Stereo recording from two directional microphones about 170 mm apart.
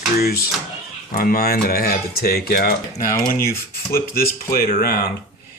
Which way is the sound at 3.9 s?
60° left (ahead or behind).